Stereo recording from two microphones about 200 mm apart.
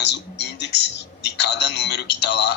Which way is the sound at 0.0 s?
60° left (ahead or behind).